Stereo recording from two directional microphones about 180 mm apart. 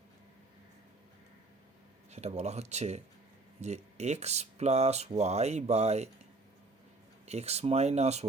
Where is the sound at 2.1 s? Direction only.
40° right (ahead or behind).